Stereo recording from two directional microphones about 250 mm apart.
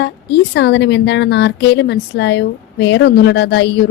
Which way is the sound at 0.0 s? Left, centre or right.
Left.